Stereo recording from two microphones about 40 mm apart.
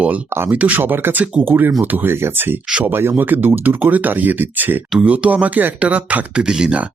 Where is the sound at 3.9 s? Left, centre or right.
Right.